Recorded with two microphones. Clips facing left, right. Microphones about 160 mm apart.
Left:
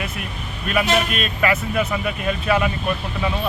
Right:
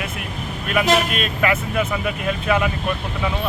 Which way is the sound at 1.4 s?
10° right (ahead or behind).